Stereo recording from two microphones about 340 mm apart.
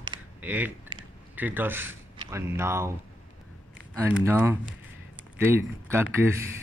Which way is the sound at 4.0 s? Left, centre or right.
Centre.